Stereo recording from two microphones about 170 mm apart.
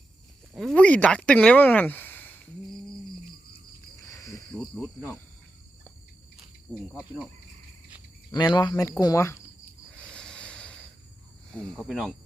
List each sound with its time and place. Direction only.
0.5 s speech: 5° left (ahead or behind)
4.1 s cricket: 20° left (ahead or behind)
4.5 s cricket: centre (ahead or behind)
6.7 s cricket: 10° right (ahead or behind)
7.0 s speech: 10° right (ahead or behind)
8.3 s speech: 25° left (ahead or behind)
10.0 s a sound: 5° left (ahead or behind)
11.5 s speech: 5° left (ahead or behind)